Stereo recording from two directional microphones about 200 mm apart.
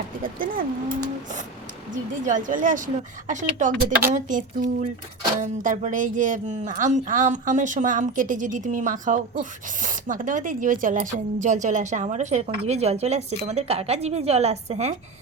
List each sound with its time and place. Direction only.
0.3 s speech: 45° right (ahead or behind)
2.2 s speech: 40° right (ahead or behind)